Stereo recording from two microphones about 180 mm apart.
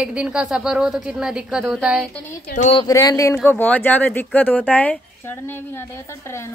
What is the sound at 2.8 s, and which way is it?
Speech, 20° left (ahead or behind).